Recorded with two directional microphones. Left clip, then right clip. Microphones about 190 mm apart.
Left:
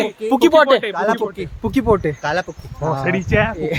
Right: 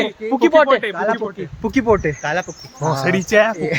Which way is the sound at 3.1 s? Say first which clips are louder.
Right 5 dB; 55° right (ahead or behind).